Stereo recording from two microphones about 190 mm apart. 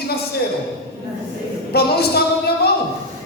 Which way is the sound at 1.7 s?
55° left (ahead or behind).